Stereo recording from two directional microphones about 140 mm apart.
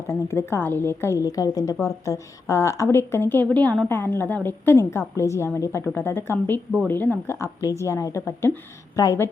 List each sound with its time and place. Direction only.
0.1 s a woman's voice: 20° left (ahead or behind)